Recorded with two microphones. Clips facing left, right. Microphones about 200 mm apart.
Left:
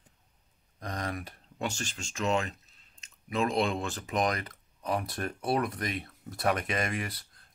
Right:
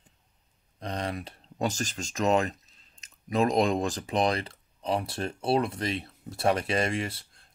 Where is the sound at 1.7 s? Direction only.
40° right (ahead or behind).